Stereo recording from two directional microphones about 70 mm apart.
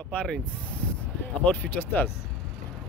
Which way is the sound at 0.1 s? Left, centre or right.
Centre.